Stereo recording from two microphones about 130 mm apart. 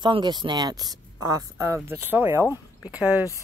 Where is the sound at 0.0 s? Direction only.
35° right (ahead or behind).